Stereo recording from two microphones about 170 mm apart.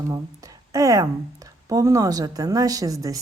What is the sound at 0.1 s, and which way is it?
Speech, 20° right (ahead or behind).